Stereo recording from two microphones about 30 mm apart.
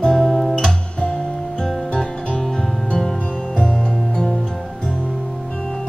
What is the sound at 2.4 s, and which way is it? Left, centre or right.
Music, centre.